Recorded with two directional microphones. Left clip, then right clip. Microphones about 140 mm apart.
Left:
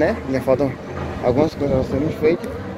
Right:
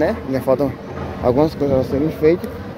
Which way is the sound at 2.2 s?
50° right (ahead or behind).